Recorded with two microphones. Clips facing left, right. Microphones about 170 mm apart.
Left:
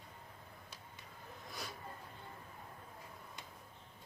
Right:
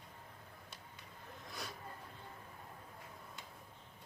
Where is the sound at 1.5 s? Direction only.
Centre (ahead or behind).